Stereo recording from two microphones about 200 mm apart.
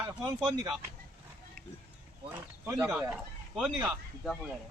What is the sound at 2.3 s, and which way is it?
Speech, 15° right (ahead or behind).